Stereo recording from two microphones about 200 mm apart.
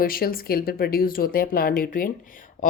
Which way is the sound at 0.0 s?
45° left (ahead or behind).